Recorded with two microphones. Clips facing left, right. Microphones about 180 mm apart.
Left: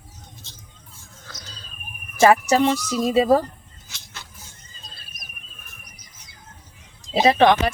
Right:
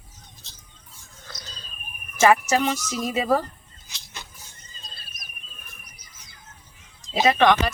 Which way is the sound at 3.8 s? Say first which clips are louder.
Right 1 dB; 15° right (ahead or behind).